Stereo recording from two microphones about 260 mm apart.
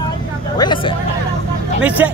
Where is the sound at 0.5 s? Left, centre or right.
Centre.